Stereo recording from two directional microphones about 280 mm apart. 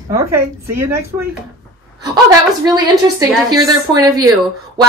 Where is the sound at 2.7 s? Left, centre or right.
Centre.